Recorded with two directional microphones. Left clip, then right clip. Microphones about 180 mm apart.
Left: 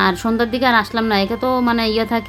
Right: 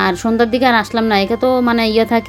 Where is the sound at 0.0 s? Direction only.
10° right (ahead or behind).